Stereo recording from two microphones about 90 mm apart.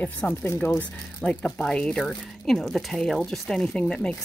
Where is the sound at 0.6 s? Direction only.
15° left (ahead or behind).